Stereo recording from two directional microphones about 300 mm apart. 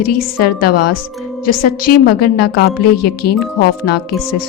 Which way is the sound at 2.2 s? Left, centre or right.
Left.